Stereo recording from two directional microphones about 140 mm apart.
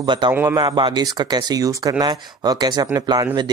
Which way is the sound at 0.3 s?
15° right (ahead or behind).